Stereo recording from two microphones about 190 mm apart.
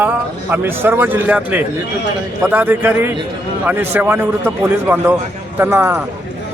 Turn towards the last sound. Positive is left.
turn(degrees=-15)  # may be behind; listen again after turning